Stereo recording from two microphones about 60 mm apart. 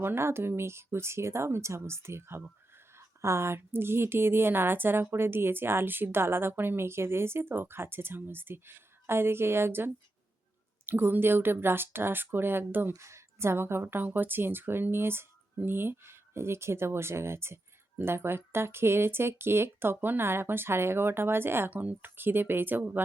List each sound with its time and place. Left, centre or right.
0.0 s a woman's voice: right
13.0 s speech: right
21.7 s a woman's voice: right